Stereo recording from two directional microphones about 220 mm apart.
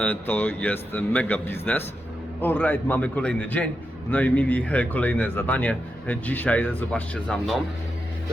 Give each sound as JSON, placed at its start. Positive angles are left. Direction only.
{"t": 0.0, "sound": "speech", "side_deg": 10}